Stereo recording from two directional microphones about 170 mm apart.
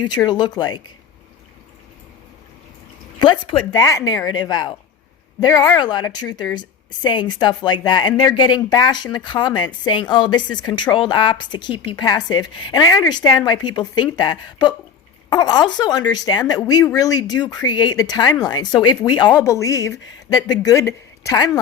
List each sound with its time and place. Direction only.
0.3 s speech: 25° left (ahead or behind)
3.2 s speech: 25° left (ahead or behind)